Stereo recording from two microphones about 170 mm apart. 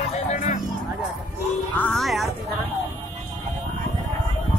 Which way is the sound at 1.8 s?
5° left (ahead or behind).